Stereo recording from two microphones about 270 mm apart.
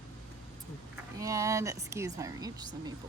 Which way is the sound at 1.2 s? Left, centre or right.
Centre.